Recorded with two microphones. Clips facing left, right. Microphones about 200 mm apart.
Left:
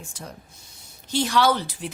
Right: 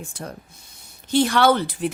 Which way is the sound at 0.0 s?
55° right (ahead or behind).